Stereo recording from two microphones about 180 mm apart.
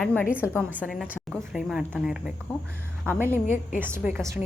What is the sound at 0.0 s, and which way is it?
Speech, 10° left (ahead or behind).